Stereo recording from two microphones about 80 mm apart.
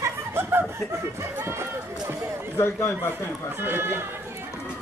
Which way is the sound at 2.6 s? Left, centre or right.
Left.